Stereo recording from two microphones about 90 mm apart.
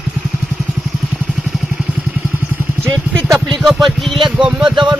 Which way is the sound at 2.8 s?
30° right (ahead or behind).